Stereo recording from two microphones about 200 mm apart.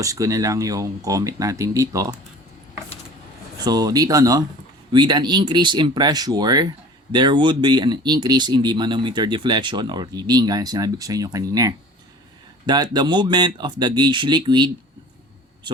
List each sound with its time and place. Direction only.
0.0 s speech: 15° right (ahead or behind)
3.6 s speech: 20° right (ahead or behind)